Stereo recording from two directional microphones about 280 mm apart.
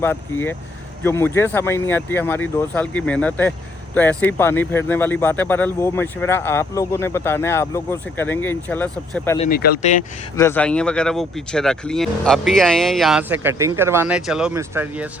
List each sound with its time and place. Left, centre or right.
0.0 s speech: centre
9.4 s speech: left
10.3 s speech: centre